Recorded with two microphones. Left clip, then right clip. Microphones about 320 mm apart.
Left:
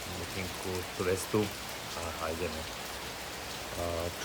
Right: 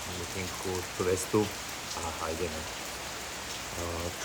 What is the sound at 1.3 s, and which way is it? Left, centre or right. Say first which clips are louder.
Speech: right 3 dB; centre.